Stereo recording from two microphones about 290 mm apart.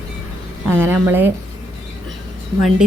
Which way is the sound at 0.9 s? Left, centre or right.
Centre.